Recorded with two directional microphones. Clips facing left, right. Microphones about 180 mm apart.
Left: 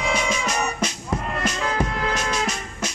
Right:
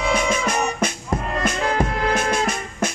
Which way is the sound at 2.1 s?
50° right (ahead or behind).